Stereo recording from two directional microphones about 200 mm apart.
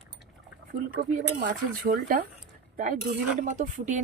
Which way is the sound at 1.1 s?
40° right (ahead or behind).